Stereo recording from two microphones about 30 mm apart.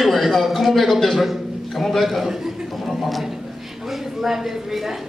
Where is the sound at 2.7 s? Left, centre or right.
Centre.